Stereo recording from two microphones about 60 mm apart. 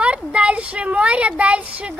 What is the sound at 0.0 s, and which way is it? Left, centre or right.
Speech, right.